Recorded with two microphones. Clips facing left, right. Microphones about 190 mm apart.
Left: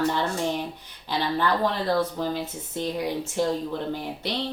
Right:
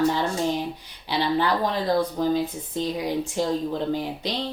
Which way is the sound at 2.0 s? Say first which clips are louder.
Right 4 dB; 15° right (ahead or behind).